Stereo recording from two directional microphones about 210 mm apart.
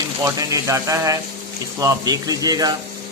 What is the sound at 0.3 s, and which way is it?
A man's voice, 15° right (ahead or behind).